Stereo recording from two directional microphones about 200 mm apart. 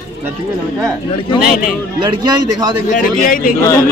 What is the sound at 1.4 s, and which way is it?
Speech, 45° left (ahead or behind).